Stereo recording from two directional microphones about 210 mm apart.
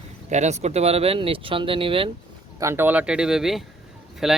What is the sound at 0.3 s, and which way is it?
Speech, 35° right (ahead or behind).